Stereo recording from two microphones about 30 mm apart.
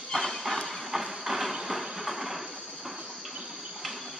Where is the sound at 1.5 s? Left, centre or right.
Centre.